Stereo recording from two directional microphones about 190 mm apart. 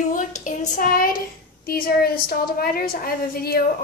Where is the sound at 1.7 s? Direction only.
50° left (ahead or behind).